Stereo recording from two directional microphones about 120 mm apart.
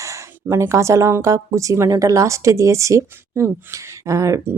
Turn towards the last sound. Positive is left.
turn(degrees=-25)  # may be behind; listen again after turning